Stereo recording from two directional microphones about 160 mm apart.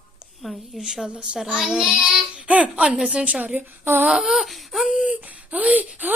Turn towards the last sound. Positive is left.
turn(degrees=-10)  # may be behind; listen again after turning